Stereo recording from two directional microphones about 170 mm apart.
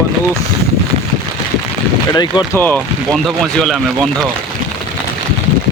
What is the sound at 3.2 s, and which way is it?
Speech, centre (ahead or behind).